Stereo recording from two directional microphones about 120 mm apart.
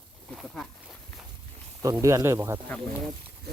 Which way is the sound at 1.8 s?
25° right (ahead or behind).